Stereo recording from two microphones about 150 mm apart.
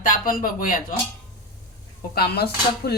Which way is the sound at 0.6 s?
70° left (ahead or behind).